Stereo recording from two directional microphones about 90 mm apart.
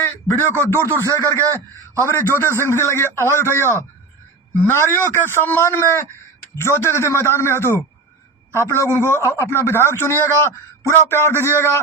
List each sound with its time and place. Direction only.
0.0 s speech: 25° left (ahead or behind)